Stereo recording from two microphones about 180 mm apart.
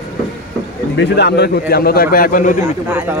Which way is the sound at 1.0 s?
70° left (ahead or behind).